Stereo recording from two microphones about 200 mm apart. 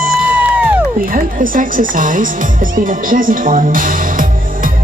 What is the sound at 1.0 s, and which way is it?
Speech, 45° right (ahead or behind).